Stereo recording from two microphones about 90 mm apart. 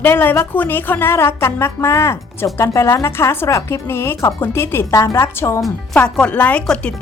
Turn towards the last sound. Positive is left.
turn(degrees=15)  # may be behind; listen again after turning